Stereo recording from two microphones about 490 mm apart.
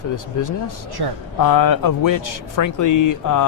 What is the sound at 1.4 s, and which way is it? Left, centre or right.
Speech, left.